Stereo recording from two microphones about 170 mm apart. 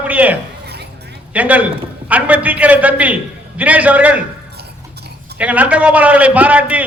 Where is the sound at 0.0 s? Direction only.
10° right (ahead or behind).